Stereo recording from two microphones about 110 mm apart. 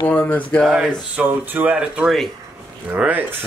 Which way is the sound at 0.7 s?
15° right (ahead or behind).